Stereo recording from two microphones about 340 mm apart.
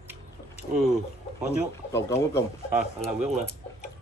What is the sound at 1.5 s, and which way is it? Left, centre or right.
Speech, centre.